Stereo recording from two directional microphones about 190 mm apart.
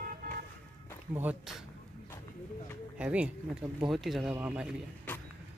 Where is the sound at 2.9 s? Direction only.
5° right (ahead or behind).